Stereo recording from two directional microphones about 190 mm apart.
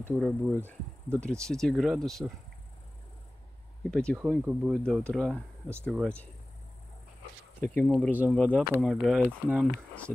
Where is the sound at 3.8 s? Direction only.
5° left (ahead or behind).